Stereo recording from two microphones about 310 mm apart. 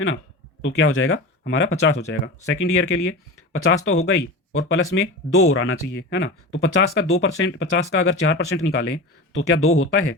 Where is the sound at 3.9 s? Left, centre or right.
Left.